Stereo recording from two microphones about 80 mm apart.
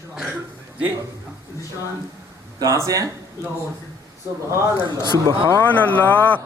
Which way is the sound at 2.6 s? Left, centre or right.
Right.